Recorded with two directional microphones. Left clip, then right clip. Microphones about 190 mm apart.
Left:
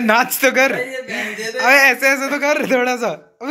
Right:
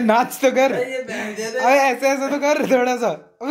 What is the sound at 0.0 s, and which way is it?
A man's voice, 5° right (ahead or behind).